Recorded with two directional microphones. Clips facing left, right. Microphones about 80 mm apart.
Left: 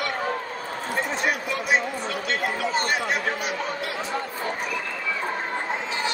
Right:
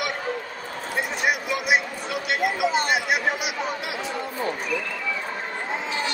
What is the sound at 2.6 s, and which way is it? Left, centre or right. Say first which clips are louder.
Chatter: right 2 dB; centre.